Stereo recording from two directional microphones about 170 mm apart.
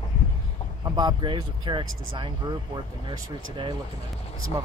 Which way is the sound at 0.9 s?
25° right (ahead or behind).